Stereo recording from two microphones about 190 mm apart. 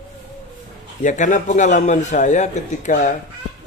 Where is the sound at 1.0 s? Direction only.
40° left (ahead or behind).